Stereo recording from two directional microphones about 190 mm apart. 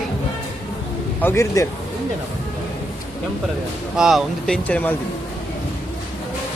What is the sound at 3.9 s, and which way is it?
Speech, centre (ahead or behind).